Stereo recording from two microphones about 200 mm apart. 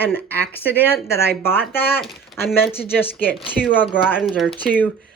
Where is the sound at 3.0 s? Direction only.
10° left (ahead or behind).